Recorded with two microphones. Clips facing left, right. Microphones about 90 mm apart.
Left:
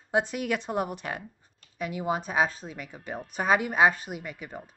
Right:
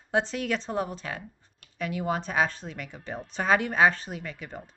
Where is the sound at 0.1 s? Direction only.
15° left (ahead or behind).